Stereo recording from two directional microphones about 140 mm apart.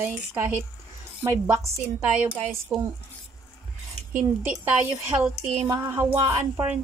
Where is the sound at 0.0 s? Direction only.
15° right (ahead or behind).